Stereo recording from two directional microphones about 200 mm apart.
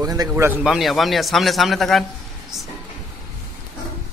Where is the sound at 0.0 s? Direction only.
20° right (ahead or behind); by 2.0 s centre (ahead or behind).